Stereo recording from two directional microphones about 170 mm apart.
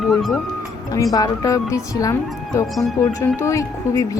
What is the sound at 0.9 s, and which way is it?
Speech, 20° left (ahead or behind).